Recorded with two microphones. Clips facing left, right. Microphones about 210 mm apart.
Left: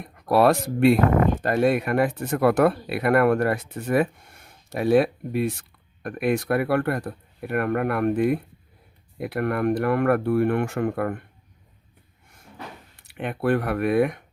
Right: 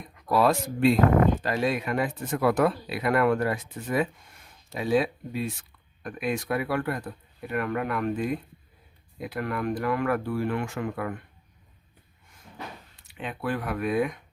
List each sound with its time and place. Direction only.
0.0 s speech: 60° left (ahead or behind)
13.1 s speech: 60° left (ahead or behind)